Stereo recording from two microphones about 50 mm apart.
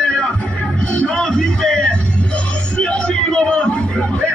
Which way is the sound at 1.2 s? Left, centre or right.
Centre.